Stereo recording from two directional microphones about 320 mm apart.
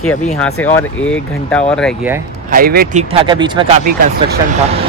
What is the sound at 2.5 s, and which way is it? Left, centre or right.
Speech, right.